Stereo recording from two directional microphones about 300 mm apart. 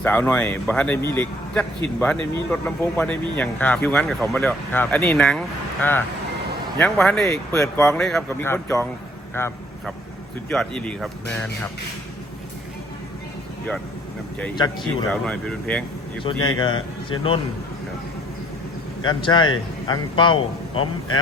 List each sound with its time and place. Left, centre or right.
0.0 s speech: centre
9.3 s vehicle: centre
10.5 s speech: centre
14.5 s speech: centre
15.1 s speech: centre
16.6 s speech: centre
19.0 s speech: centre